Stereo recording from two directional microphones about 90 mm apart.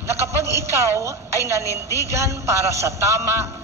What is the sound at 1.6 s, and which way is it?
Speech, 35° left (ahead or behind).